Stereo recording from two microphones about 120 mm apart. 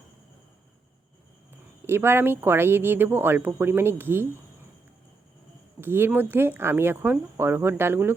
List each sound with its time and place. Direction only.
1.8 s speech: 20° right (ahead or behind)
5.8 s speech: 20° right (ahead or behind)